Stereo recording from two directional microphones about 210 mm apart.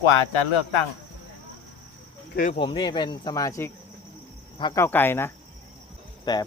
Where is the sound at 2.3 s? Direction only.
40° left (ahead or behind).